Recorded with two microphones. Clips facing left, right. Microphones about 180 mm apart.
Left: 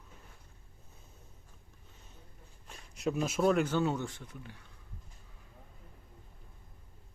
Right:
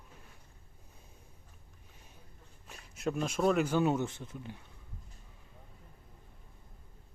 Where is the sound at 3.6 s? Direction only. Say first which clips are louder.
Right 2 dB; 15° right (ahead or behind).